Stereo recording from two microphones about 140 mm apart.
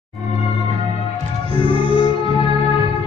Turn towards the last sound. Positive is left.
turn(degrees=-35)  # may be behind; listen again after turning